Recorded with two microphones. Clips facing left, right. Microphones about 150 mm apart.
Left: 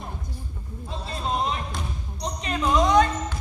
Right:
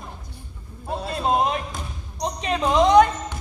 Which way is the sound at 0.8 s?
60° right (ahead or behind).